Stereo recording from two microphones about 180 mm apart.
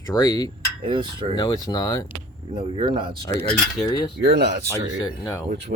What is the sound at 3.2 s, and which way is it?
Speech, 15° left (ahead or behind).